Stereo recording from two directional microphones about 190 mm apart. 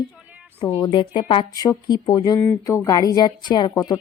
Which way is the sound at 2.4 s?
10° left (ahead or behind).